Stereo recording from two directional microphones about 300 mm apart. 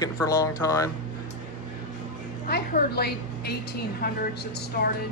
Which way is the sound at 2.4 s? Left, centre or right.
Left.